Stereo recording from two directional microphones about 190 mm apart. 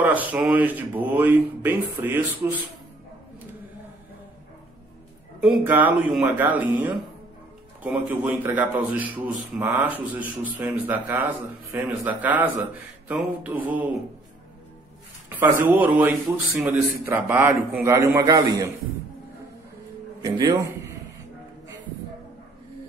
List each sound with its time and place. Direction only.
0.0 s speech: 10° right (ahead or behind)
5.4 s speech: 5° right (ahead or behind)
15.2 s a sound: 10° right (ahead or behind)
15.7 s speech: 10° right (ahead or behind)
20.2 s a man's voice: 20° right (ahead or behind)